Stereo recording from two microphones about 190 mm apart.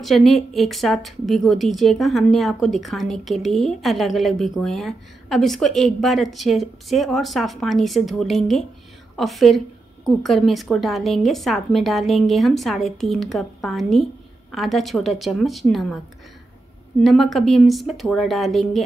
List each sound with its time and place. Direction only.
0.0 s a woman's voice: centre (ahead or behind)
17.0 s a woman's voice: centre (ahead or behind)